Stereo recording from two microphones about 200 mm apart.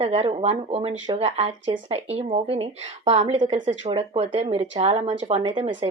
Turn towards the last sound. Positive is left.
turn(degrees=-30)  # may be behind; listen again after turning